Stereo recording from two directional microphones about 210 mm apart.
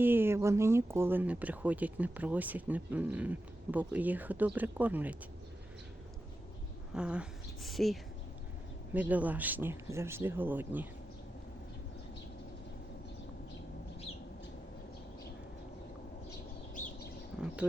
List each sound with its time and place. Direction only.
0.0 s speech: 10° right (ahead or behind)
6.9 s speech: 5° right (ahead or behind)